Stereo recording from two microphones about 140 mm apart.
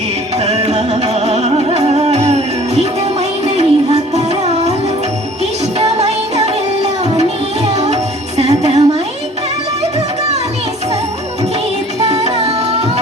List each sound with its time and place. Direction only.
0.3 s music: 50° right (ahead or behind)
6.0 s music: 50° right (ahead or behind)
12.0 s music: 50° right (ahead or behind)